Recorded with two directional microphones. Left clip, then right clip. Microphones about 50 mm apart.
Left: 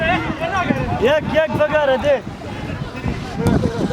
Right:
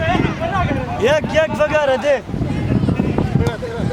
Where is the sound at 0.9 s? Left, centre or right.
Right.